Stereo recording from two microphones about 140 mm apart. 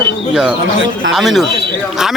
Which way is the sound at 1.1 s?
Centre (ahead or behind).